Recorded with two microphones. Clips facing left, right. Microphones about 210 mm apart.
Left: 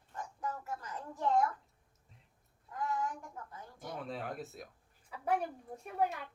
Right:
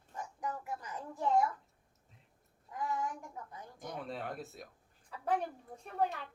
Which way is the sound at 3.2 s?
15° right (ahead or behind).